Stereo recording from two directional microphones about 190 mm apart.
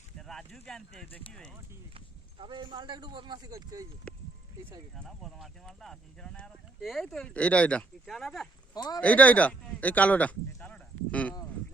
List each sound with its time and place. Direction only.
0.2 s speech: centre (ahead or behind)
2.4 s speech: 25° right (ahead or behind)
4.9 s speech: centre (ahead or behind)
8.7 s speech: 20° left (ahead or behind)
9.0 s speech: 10° left (ahead or behind)